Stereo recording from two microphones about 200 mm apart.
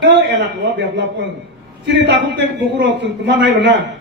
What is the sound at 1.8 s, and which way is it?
A man's voice, 60° right (ahead or behind).